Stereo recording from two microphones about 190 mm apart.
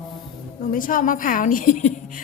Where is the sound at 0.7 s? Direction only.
45° left (ahead or behind).